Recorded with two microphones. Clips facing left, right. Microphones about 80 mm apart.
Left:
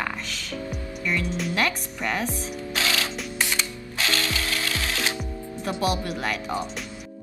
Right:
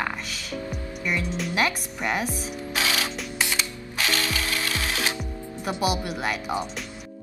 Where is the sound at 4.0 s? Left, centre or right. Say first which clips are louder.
Even; right.